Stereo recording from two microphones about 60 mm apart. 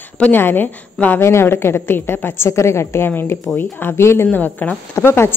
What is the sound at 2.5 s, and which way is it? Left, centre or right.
A woman's voice, left.